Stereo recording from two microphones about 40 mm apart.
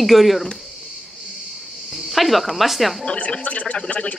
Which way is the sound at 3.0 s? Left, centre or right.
Left.